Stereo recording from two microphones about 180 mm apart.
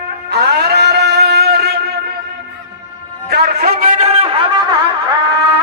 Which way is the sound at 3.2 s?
65° right (ahead or behind).